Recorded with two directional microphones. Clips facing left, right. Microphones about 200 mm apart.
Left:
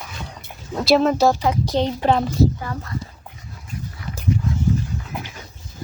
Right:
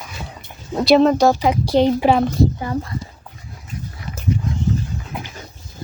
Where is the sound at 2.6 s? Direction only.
20° right (ahead or behind).